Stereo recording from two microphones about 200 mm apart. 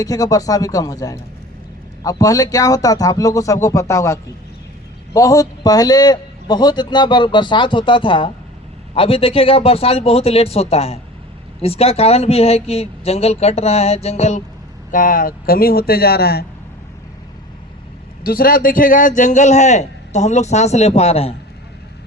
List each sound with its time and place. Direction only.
0.0 s a man's voice: 15° left (ahead or behind); by 16.5 s 50° left (ahead or behind)
18.2 s a man's voice: 45° left (ahead or behind); by 21.3 s 30° left (ahead or behind)